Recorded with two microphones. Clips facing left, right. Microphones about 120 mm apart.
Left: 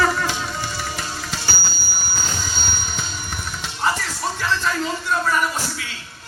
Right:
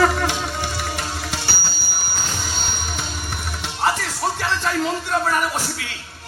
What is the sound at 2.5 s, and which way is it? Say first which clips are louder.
Music: right 1 dB; 60° right (ahead or behind).